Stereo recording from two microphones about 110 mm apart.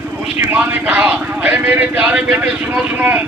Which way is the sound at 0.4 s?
15° right (ahead or behind).